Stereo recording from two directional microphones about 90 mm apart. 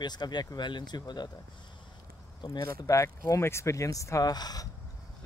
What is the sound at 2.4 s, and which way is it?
Speech, 45° left (ahead or behind).